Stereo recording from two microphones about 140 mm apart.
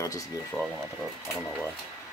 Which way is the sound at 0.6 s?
20° left (ahead or behind).